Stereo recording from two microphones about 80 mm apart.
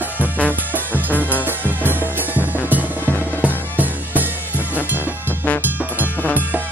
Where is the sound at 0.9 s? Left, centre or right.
Right.